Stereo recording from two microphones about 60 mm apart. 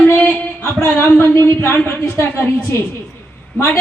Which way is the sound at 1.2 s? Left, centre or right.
Left.